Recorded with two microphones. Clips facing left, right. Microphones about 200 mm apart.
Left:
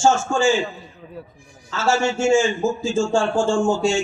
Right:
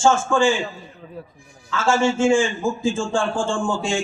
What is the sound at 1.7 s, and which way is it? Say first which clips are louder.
A man's voice: right 1 dB; 50° right (ahead or behind).